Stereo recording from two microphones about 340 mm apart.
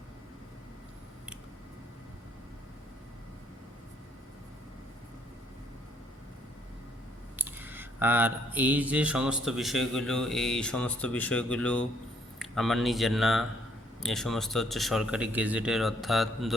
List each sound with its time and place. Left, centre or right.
7.3 s mantra: centre
12.4 s speech: centre
14.0 s mantra: centre